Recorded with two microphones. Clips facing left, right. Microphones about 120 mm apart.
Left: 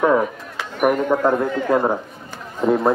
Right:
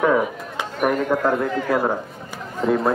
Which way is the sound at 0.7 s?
15° left (ahead or behind).